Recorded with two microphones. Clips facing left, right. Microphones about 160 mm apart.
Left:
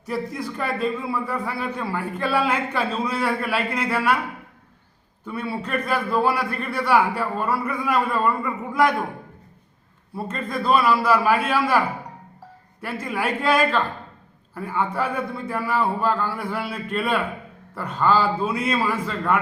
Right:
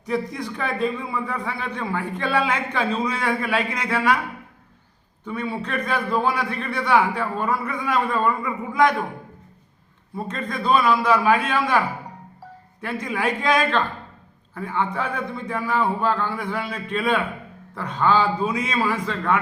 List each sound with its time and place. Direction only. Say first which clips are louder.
0.0 s a man's voice: right 2 dB; 5° left (ahead or behind)
5.2 s a man's voice: right 1 dB; 5° left (ahead or behind)
10.2 s a man's voice: left 1 dB; 5° left (ahead or behind)
12.8 s a man's voice: right 1 dB; 5° left (ahead or behind)